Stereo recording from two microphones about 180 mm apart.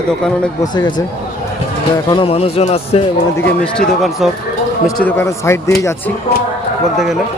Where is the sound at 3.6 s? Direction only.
Centre (ahead or behind).